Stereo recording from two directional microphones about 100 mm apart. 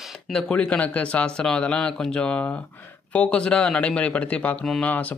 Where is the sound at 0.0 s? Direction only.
5° left (ahead or behind).